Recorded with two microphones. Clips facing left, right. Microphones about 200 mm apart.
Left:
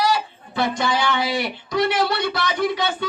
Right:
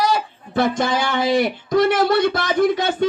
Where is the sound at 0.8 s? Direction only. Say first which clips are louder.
Right 2 dB; 45° right (ahead or behind).